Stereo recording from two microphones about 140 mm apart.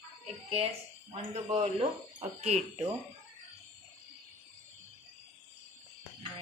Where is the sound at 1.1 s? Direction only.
45° right (ahead or behind).